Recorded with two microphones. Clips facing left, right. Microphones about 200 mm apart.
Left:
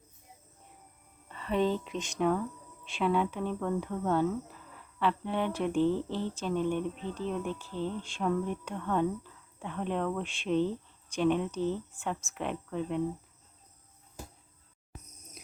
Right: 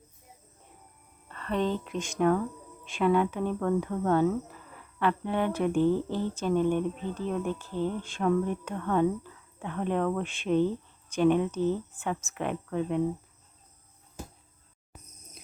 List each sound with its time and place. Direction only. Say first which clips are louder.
1.3 s speech: even; 10° left (ahead or behind)
7.7 s speech: right 5 dB; 45° right (ahead or behind)
8.0 s speech: right 4 dB; centre (ahead or behind)